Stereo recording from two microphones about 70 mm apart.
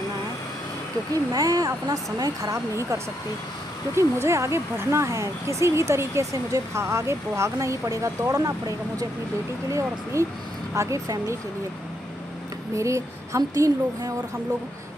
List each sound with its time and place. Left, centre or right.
1.3 s speech: right
2.7 s speech: right
12.7 s speech: right